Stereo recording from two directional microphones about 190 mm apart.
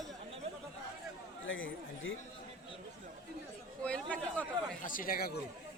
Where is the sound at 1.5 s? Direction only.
90° left.